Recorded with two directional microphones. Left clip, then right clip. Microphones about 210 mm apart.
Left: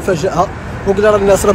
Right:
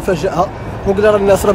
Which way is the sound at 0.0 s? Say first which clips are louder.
Left 1 dB; 10° right (ahead or behind).